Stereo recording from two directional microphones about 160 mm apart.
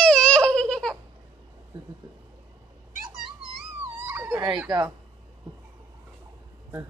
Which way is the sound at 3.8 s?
15° right (ahead or behind).